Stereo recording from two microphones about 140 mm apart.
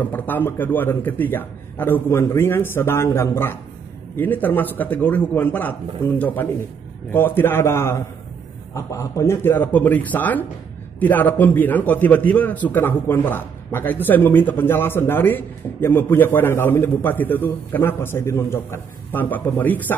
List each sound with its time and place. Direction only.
0.0 s a man's voice: 15° left (ahead or behind)